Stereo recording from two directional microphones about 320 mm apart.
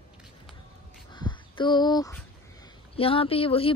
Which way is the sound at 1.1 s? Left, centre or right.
Centre.